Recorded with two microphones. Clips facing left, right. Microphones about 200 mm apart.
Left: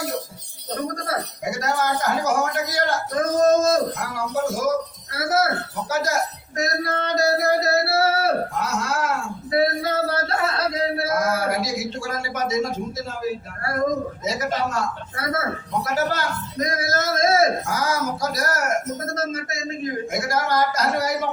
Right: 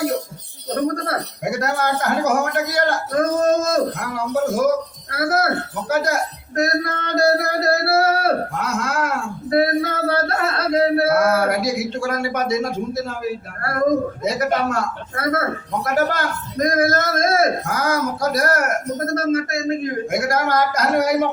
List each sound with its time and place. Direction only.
0.7 s a man's voice: 60° right (ahead or behind)
5.1 s a man's voice: 60° right (ahead or behind)
14.3 s a man's voice: 60° right (ahead or behind)